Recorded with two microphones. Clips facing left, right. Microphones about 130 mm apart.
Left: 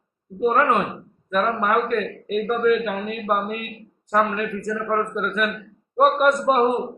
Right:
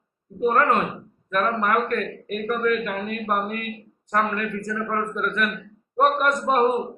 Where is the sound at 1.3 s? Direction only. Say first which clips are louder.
Left 1 dB; 5° left (ahead or behind).